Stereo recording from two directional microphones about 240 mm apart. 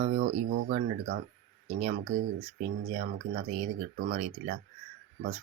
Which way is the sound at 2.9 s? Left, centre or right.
Right.